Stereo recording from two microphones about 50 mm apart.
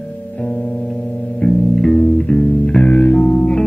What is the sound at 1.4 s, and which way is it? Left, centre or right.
Music, centre.